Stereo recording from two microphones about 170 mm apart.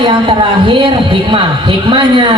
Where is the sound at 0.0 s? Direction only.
30° right (ahead or behind).